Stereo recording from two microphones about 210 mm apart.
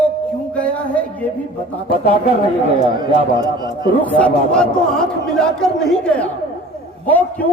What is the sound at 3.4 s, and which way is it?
Speech, 20° right (ahead or behind).